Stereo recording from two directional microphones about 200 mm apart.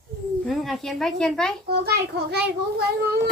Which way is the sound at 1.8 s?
55° right (ahead or behind).